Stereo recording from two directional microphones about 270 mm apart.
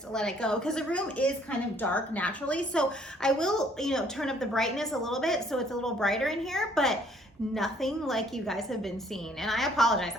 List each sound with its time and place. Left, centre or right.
0.1 s a woman's voice: centre